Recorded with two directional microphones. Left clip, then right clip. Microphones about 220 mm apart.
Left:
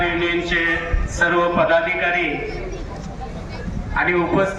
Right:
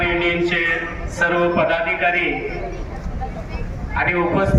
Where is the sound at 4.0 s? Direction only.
45° right (ahead or behind).